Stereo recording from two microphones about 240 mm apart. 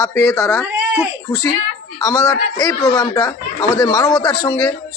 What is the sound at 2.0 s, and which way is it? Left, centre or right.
Speech, centre.